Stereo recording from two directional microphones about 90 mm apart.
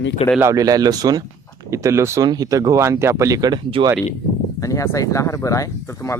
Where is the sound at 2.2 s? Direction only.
45° right (ahead or behind).